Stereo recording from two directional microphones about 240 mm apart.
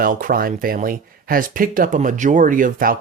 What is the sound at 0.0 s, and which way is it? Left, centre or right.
Speech, right.